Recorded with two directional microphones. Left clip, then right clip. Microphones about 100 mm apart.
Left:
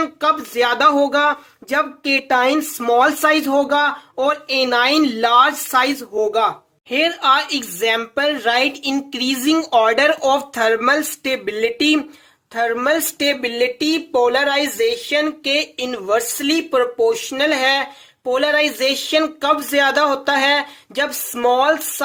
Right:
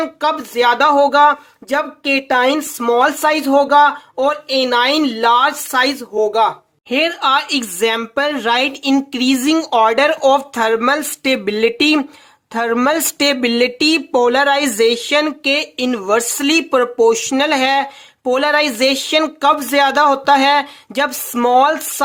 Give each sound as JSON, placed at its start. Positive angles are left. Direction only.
{"t": 0.0, "sound": "speech", "side_deg": -20}
{"t": 6.9, "sound": "speech", "side_deg": -45}
{"t": 11.8, "sound": "speech", "side_deg": -60}
{"t": 12.5, "sound": "speech", "side_deg": -85}
{"t": 15.1, "sound": "speech", "side_deg": -80}